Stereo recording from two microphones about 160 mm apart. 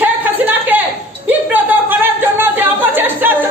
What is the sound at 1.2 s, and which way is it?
Speech, 10° right (ahead or behind).